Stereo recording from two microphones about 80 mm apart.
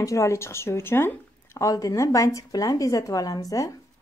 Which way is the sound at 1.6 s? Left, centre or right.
Left.